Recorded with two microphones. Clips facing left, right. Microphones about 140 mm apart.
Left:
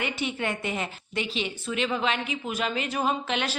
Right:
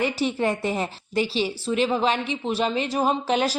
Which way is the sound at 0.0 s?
35° right (ahead or behind).